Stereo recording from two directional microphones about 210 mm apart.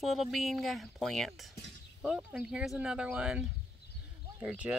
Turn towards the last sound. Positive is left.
turn(degrees=-5)  # may be behind; listen again after turning